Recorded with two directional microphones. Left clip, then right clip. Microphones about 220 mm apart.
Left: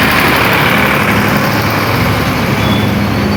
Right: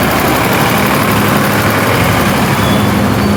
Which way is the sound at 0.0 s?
50° right (ahead or behind).